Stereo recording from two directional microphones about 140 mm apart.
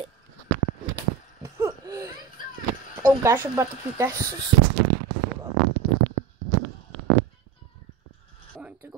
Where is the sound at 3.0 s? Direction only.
15° right (ahead or behind).